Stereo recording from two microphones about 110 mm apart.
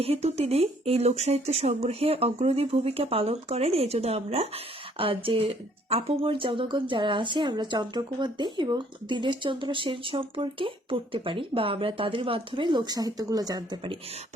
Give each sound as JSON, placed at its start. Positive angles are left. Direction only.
{"t": 0.0, "sound": "speech", "side_deg": -70}